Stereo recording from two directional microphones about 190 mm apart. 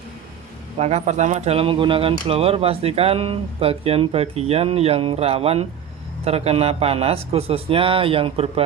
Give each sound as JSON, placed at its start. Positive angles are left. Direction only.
{"t": 0.8, "sound": "speech", "side_deg": -35}